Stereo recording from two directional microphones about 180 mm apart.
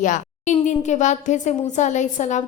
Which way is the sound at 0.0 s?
45° left (ahead or behind).